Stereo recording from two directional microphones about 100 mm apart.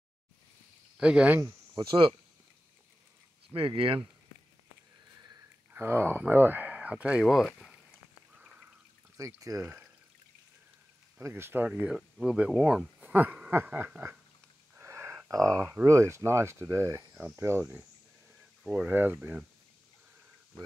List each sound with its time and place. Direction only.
0.9 s speech: 10° right (ahead or behind)
1.8 s speech: 55° right (ahead or behind)
3.5 s speech: 60° right (ahead or behind)
5.7 s speech: 20° right (ahead or behind); by 7.8 s 5° left (ahead or behind)
8.4 s a sound: 10° right (ahead or behind)
9.1 s speech: 30° right (ahead or behind)
9.6 s speech: 15° right (ahead or behind)
11.2 s speech: 25° right (ahead or behind)
14.8 s a sound: 25° right (ahead or behind)
15.2 s speech: 30° right (ahead or behind)
18.6 s speech: 10° right (ahead or behind)